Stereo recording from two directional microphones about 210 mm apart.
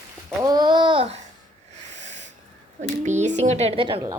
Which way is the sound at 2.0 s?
35° right (ahead or behind).